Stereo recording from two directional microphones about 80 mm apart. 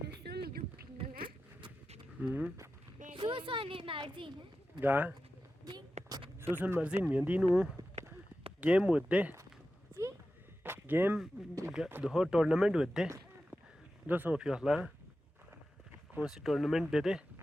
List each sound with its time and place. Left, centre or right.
2.2 s speech: centre
3.2 s a woman's voice: right
4.8 s speech: right
5.6 s vehicle: right
6.4 s speech: right
10.6 s a sound: right
12.0 s speech: centre
14.1 s speech: right
14.3 s speech: centre
16.1 s speech: centre